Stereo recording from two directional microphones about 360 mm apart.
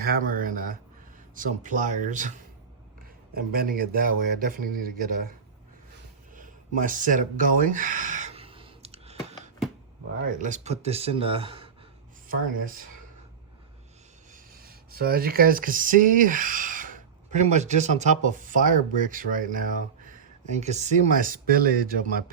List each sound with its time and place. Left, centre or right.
0.0 s a sound: right
1.4 s speech: right
3.3 s speech: right
4.1 s speech: right
4.4 s speech: right
6.3 s a sound: right
10.3 s speech: centre
14.5 s speech: right